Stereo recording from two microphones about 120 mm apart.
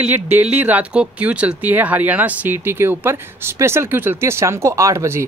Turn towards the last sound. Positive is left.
turn(degrees=-20)  # may be behind; listen again after turning